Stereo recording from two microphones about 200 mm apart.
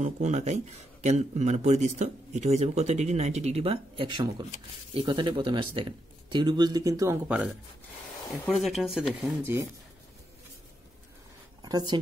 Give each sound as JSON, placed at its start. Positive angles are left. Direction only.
{"t": 0.0, "sound": "speech", "side_deg": -35}
{"t": 8.3, "sound": "speech", "side_deg": 0}
{"t": 11.6, "sound": "speech", "side_deg": -20}